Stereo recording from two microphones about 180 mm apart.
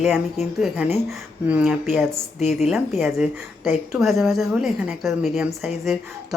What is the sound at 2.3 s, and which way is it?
Speech, 35° left (ahead or behind).